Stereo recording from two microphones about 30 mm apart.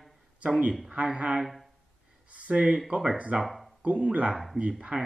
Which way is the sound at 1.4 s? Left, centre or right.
Centre.